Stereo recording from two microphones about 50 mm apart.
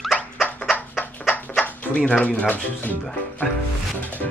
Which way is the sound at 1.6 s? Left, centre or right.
Left.